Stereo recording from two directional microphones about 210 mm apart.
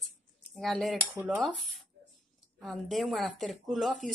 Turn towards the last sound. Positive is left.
turn(degrees=0)  # may be behind; listen again after turning